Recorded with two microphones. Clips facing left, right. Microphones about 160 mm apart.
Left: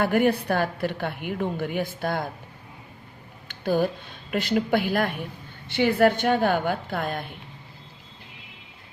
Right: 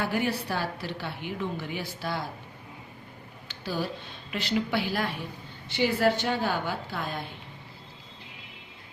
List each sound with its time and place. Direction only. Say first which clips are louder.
0.0 s a woman's voice: left 7 dB; 55° left (ahead or behind)
3.5 s a sound: left 9 dB; 55° left (ahead or behind)
4.3 s a woman's voice: left 6 dB; 50° left (ahead or behind)